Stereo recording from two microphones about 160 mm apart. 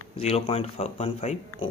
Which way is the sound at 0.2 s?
40° left (ahead or behind).